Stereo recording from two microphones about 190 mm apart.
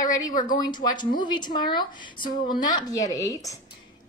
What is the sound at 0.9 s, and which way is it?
Speech, 25° left (ahead or behind).